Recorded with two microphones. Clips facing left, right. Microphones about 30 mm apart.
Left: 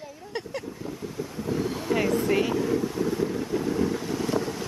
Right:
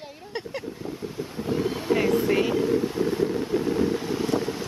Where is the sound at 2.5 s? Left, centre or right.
Right.